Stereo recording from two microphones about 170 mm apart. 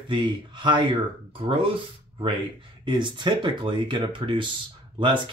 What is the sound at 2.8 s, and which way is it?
Speech, 25° right (ahead or behind).